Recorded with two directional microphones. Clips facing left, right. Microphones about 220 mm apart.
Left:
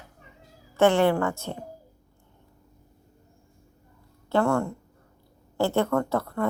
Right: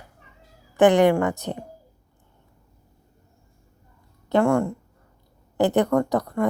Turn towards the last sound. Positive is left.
turn(degrees=-15)  # may be behind; listen again after turning